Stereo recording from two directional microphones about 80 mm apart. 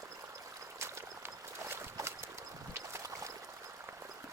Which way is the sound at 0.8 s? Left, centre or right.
Right.